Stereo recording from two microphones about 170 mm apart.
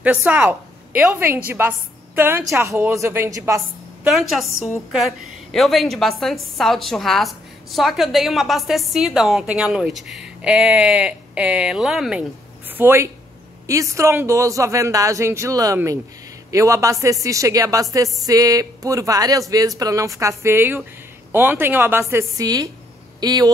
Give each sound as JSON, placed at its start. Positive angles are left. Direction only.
{"t": 0.0, "sound": "a woman's voice", "side_deg": -10}
{"t": 4.1, "sound": "a woman's voice", "side_deg": 0}
{"t": 12.7, "sound": "a woman's voice", "side_deg": -15}